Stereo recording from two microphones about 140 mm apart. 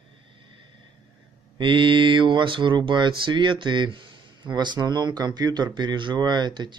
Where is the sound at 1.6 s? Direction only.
35° right (ahead or behind).